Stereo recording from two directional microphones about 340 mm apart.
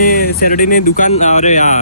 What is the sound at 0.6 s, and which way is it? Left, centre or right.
Speech, left.